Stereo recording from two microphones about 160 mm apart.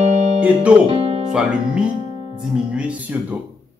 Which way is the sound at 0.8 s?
35° right (ahead or behind).